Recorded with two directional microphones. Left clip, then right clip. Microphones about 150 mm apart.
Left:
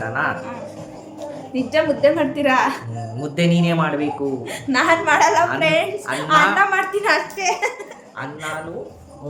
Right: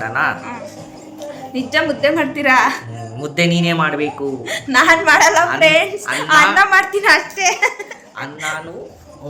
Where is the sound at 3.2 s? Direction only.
15° left (ahead or behind).